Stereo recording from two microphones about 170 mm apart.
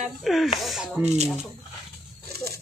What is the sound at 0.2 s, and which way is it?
Speech, centre (ahead or behind).